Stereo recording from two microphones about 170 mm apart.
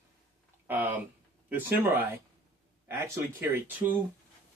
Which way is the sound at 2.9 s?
15° right (ahead or behind).